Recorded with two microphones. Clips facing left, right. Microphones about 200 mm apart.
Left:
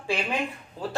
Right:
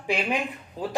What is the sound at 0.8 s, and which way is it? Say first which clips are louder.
Speech: right 2 dB; 15° right (ahead or behind).